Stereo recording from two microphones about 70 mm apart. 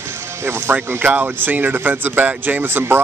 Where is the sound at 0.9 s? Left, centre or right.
Right.